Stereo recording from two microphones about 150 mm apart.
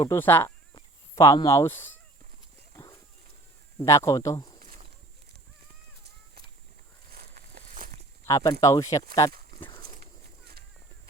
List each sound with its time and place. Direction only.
0.0 s speech: 15° left (ahead or behind)
3.8 s speech: 20° left (ahead or behind)
7.1 s a sound: 90° right
8.3 s speech: 25° left (ahead or behind)